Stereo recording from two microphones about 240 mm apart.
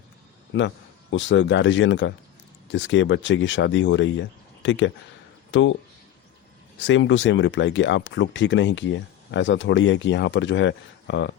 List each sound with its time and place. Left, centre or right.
1.1 s speech: left
6.7 s speech: left